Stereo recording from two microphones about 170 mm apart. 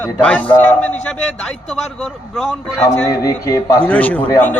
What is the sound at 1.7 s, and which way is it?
Speech, 5° left (ahead or behind).